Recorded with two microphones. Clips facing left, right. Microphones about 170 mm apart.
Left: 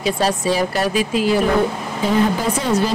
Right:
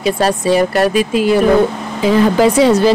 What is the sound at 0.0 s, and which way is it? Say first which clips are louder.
Speech: right 4 dB; 65° right (ahead or behind).